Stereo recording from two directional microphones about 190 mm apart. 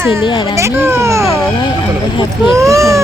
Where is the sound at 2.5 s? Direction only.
15° right (ahead or behind).